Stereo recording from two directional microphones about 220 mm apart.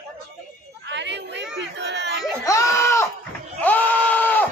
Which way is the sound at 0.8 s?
50° right (ahead or behind).